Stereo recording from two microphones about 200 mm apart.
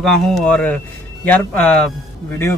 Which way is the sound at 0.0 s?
Centre (ahead or behind).